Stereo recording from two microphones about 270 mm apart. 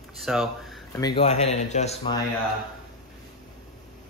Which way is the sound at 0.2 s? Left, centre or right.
Centre.